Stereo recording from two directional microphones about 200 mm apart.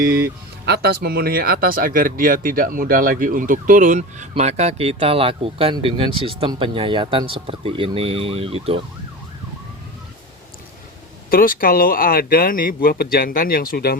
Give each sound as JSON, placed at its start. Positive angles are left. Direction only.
{"t": 0.0, "sound": "speech", "side_deg": -50}
{"t": 11.3, "sound": "speech", "side_deg": 45}